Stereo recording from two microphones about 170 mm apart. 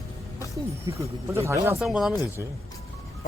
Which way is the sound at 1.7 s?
Centre (ahead or behind).